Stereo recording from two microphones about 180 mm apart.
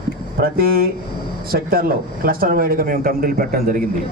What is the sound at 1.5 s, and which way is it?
Speech, 55° right (ahead or behind).